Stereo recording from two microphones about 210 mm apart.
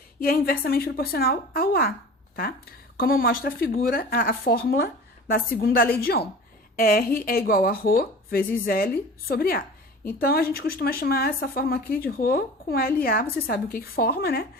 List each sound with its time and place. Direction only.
0.2 s speech: 45° left (ahead or behind)
3.0 s speech: 45° left (ahead or behind)